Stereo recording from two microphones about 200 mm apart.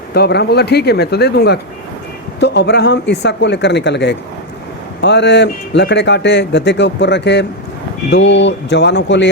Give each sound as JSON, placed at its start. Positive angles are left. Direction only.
{"t": 0.1, "sound": "speech", "side_deg": 55}